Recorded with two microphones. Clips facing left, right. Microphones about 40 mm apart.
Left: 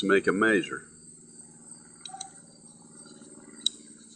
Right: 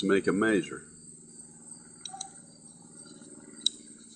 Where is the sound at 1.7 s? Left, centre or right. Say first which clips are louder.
Even; centre.